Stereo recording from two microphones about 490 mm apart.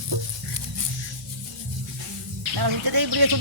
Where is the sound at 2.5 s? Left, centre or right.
Right.